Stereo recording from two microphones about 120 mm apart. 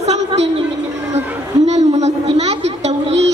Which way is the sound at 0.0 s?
65° right (ahead or behind).